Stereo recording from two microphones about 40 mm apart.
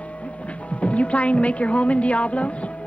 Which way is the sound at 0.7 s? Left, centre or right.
Left.